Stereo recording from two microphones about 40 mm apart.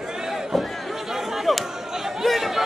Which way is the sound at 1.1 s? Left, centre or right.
Centre.